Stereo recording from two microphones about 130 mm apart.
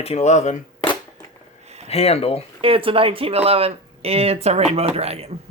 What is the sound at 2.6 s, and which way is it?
Speech, 45° right (ahead or behind).